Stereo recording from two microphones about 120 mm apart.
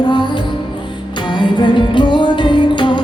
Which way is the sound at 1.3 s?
40° left (ahead or behind).